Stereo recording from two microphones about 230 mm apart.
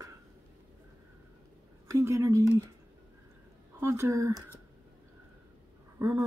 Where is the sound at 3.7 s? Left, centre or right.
Centre.